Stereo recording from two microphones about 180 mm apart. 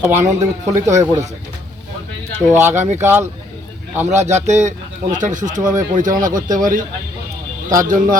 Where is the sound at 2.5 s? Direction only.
15° right (ahead or behind).